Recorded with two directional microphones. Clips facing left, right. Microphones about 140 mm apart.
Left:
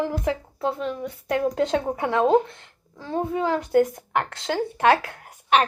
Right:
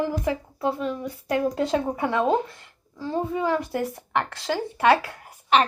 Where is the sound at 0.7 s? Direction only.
5° right (ahead or behind).